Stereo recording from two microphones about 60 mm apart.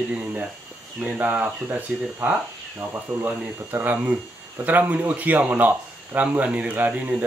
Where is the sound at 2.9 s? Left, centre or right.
Right.